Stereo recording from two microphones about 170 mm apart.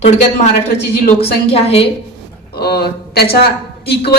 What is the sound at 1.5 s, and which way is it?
Speech, 35° left (ahead or behind).